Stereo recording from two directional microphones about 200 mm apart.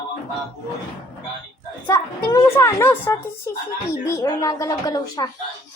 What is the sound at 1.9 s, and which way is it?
A woman's voice, 15° left (ahead or behind).